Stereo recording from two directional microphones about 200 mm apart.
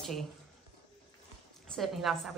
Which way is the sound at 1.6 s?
Centre (ahead or behind).